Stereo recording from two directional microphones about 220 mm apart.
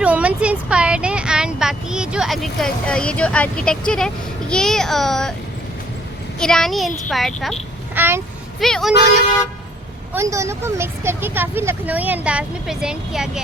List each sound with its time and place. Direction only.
0.0 s a sound: 5° right (ahead or behind)
6.4 s a child's voice: centre (ahead or behind)
7.9 s speech: 10° right (ahead or behind)
8.6 s a child's voice: centre (ahead or behind)
10.2 s speech: 15° right (ahead or behind)